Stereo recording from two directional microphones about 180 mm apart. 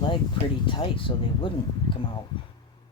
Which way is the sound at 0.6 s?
25° left (ahead or behind).